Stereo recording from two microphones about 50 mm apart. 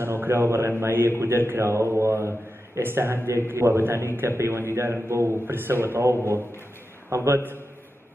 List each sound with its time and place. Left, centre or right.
0.0 s a man's voice: right
1.7 s speech: right
2.9 s a man's voice: right
7.1 s a man's voice: right